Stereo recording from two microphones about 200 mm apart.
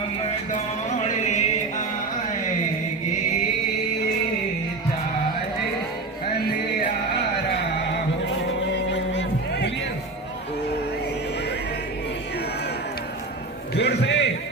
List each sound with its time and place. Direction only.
0.5 s music: 35° left (ahead or behind)
6.3 s music: 50° left (ahead or behind)
8.7 s music: 60° left (ahead or behind)
13.7 s a sound: 60° left (ahead or behind)